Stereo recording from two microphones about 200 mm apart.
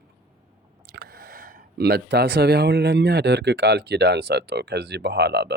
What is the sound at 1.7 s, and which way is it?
Speech, 55° right (ahead or behind).